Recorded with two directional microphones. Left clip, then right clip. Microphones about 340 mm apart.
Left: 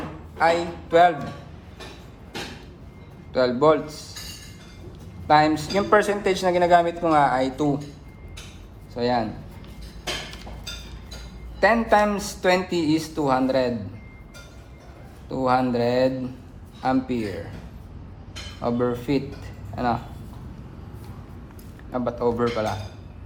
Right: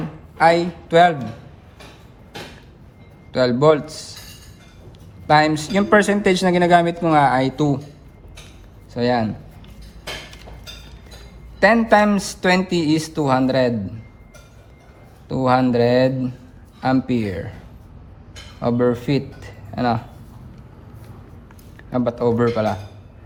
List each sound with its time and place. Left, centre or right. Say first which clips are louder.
0.3 s a man's voice: right 6 dB; right
3.3 s speech: right 3 dB; right
5.3 s speech: right 3 dB; right
8.9 s a man's voice: right 4 dB; right
11.6 s speech: right 4 dB; right
15.3 s speech: right 4 dB; right
18.6 s speech: right 5 dB; right
21.9 s speech: right 5 dB; right